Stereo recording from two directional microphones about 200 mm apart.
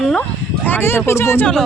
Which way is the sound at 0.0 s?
5° left (ahead or behind).